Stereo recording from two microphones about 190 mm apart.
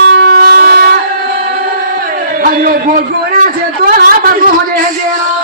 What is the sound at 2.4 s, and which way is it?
A man's voice, 50° right (ahead or behind).